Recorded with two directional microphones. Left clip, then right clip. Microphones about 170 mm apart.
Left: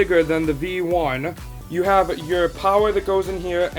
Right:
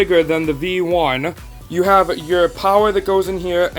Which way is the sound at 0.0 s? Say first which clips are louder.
Right 3 dB; 30° right (ahead or behind).